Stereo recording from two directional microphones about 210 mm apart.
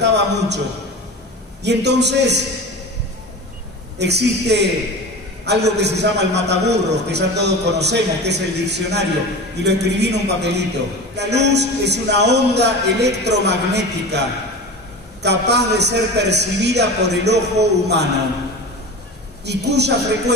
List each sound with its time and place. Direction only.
0.0 s a man's voice: 55° right (ahead or behind)
1.6 s a man's voice: 55° right (ahead or behind)
4.0 s a man's voice: 55° right (ahead or behind)
15.2 s a man's voice: 55° right (ahead or behind)
19.4 s a man's voice: 55° right (ahead or behind)